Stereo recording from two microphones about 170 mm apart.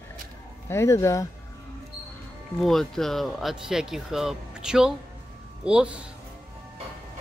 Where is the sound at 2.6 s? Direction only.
Centre (ahead or behind).